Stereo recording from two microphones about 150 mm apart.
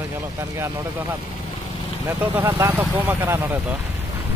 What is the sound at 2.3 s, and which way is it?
Speech, 15° right (ahead or behind).